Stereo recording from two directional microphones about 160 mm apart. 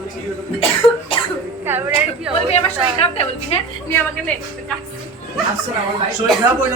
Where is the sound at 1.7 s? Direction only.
10° right (ahead or behind).